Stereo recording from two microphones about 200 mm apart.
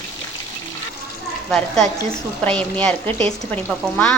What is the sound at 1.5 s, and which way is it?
A woman's voice, centre (ahead or behind).